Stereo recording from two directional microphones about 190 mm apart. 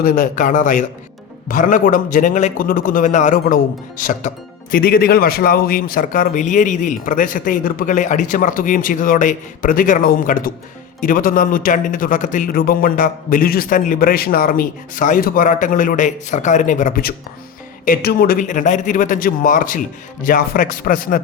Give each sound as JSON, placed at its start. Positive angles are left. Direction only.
{"t": 0.0, "sound": "a man's voice", "side_deg": 45}